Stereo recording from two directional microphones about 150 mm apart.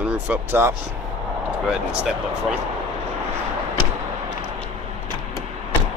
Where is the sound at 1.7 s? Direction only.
5° right (ahead or behind).